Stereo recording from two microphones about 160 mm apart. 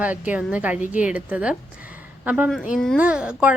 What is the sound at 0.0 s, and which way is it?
A woman's voice, 10° right (ahead or behind).